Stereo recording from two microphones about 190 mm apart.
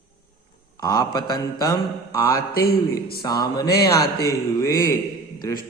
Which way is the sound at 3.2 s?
20° left (ahead or behind).